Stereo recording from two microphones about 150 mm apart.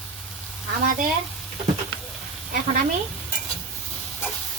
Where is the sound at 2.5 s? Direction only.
55° right (ahead or behind).